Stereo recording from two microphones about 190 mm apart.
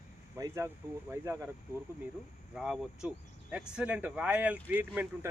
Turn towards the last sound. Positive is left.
turn(degrees=-10)  # may be behind; listen again after turning